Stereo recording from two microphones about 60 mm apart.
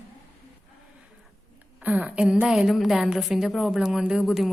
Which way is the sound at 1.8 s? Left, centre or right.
Right.